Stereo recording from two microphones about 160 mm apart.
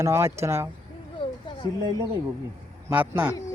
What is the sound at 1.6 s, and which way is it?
Speech, 30° left (ahead or behind).